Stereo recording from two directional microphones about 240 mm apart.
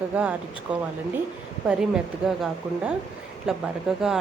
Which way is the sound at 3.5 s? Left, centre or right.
Centre.